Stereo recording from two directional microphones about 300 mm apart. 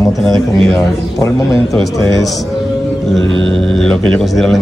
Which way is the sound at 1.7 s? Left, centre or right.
Centre.